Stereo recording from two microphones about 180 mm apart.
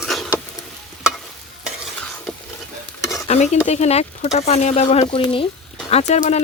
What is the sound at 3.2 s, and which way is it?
Speech, 40° left (ahead or behind).